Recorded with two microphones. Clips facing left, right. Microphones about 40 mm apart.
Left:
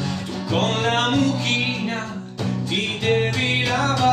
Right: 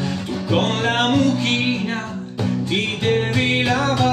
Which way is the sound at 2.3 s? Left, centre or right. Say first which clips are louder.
Right 3 dB; centre.